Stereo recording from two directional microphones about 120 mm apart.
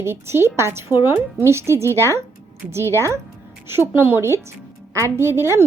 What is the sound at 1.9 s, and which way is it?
Speech, 20° left (ahead or behind).